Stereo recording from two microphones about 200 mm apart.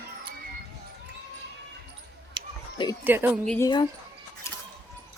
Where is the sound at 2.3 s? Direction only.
25° right (ahead or behind).